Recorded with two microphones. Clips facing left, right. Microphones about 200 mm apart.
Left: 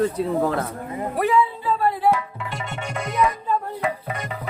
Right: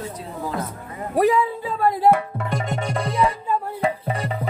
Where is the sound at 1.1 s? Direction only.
40° right (ahead or behind).